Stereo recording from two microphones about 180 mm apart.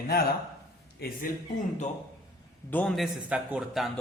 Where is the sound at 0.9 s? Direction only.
55° left (ahead or behind).